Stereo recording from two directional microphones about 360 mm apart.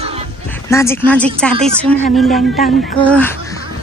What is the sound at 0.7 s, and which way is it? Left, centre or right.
Speech, centre.